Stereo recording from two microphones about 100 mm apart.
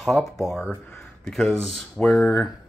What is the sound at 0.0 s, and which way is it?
Speech, centre (ahead or behind).